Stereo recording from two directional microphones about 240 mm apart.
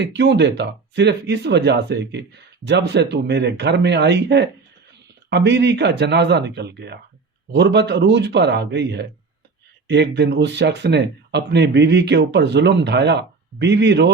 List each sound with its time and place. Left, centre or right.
0.0 s speech: right